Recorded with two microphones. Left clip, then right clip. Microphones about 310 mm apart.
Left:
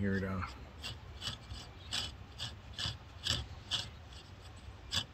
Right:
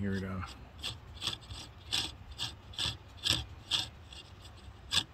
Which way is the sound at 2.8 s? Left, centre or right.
Right.